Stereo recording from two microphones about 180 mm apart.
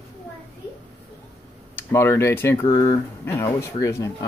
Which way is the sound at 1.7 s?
15° left (ahead or behind).